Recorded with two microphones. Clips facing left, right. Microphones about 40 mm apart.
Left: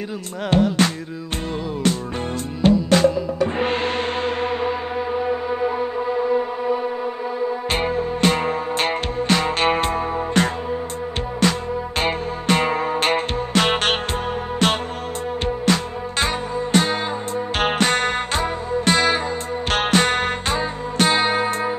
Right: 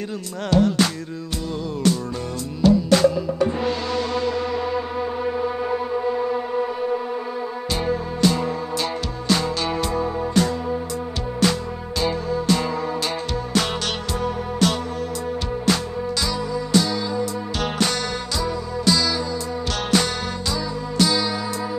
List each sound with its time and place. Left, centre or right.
3.5 s music: left
5.2 s a sound: centre
7.7 s music: left
12.0 s music: left
16.2 s music: left